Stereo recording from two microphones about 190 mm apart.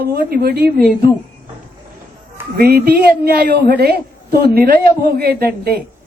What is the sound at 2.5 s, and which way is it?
A woman's voice, 55° right (ahead or behind).